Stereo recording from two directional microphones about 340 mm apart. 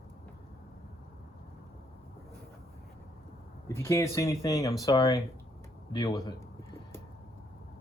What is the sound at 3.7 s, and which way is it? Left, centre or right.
Speech, centre.